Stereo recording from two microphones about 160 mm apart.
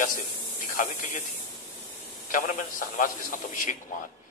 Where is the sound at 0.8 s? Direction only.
55° left (ahead or behind).